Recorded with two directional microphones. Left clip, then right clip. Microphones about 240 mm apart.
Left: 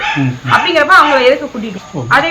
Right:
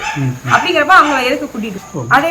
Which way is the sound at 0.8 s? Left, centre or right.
Centre.